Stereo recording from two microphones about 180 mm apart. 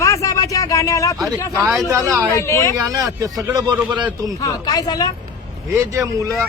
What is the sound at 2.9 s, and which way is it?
Speech, 20° right (ahead or behind).